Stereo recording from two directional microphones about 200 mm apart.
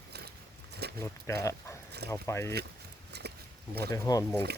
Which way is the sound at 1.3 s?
15° left (ahead or behind).